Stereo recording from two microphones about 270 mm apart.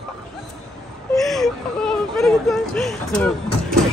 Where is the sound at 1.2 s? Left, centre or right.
Centre.